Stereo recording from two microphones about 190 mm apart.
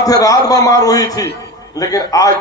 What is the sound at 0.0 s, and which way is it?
A man's voice, 20° left (ahead or behind).